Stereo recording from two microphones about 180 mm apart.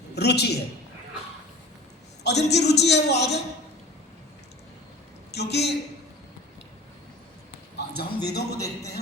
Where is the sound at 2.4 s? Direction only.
70° left (ahead or behind).